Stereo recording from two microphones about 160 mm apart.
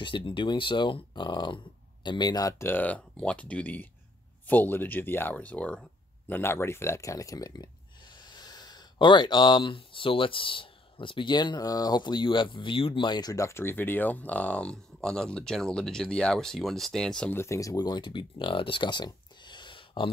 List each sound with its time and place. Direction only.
0.0 s speech: 30° left (ahead or behind)